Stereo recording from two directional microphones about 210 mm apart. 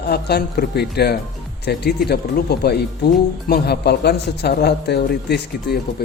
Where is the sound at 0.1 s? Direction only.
50° left (ahead or behind).